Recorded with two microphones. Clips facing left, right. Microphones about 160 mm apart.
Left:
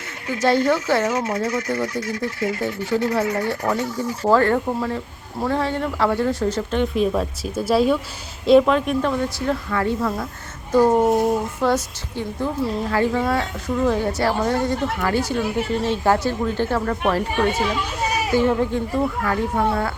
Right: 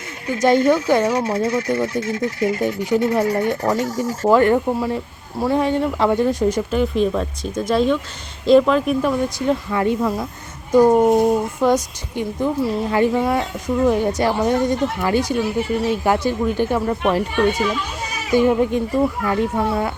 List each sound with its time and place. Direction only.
0.4 s a woman's voice: 20° right (ahead or behind)
1.0 s speech: 30° right (ahead or behind)
3.8 s speech: 40° right (ahead or behind)
4.3 s a woman's voice: 15° right (ahead or behind)
11.0 s speech: centre (ahead or behind)
11.3 s a woman's voice: 15° right (ahead or behind)
18.3 s a woman's voice: 15° right (ahead or behind)